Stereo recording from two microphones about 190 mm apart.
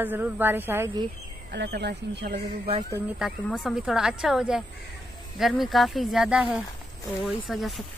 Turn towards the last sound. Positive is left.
turn(degrees=0)  # may be behind; listen again after turning